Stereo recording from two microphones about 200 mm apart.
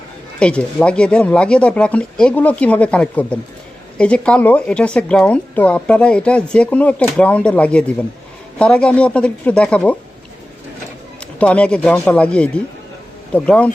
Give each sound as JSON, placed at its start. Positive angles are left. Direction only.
{"t": 0.3, "sound": "speech", "side_deg": 5}
{"t": 11.3, "sound": "speech", "side_deg": 5}